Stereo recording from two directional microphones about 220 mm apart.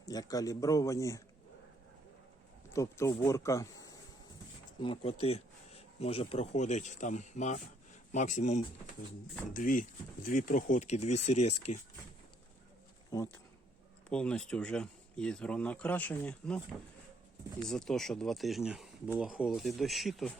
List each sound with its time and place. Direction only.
0.0 s speech: 15° left (ahead or behind)
2.7 s speech: 15° left (ahead or behind); by 11.8 s 30° left (ahead or behind)
13.1 s speech: 15° left (ahead or behind)
17.7 s speech: centre (ahead or behind)